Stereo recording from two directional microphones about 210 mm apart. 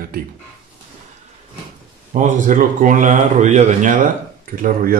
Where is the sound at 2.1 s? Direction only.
35° right (ahead or behind).